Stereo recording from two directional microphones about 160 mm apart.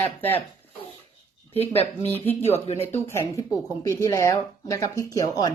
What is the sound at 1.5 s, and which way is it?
Speech, 40° left (ahead or behind).